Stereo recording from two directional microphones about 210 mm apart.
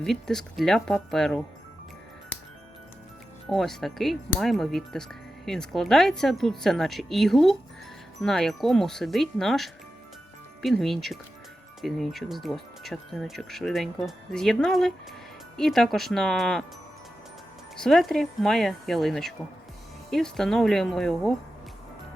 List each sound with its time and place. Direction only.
0.0 s speech: centre (ahead or behind)
3.5 s speech: centre (ahead or behind)
17.7 s speech: centre (ahead or behind)